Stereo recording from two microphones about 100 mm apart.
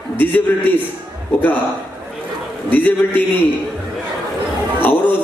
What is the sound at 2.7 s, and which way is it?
Speech, 20° left (ahead or behind).